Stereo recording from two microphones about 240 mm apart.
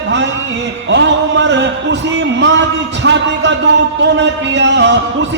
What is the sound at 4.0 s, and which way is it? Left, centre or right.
Speech, right.